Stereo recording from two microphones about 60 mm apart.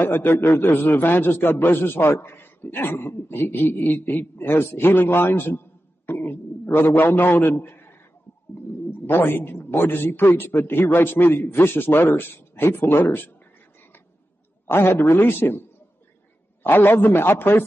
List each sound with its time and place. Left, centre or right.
0.0 s a man's voice: left
9.0 s a man's voice: left
14.7 s a man's voice: left
16.6 s a man's voice: left